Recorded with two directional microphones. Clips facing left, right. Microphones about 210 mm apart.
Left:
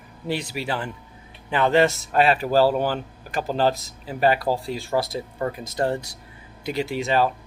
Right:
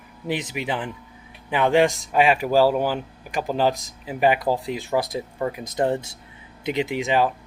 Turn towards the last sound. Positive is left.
turn(degrees=-15)  # may be behind; listen again after turning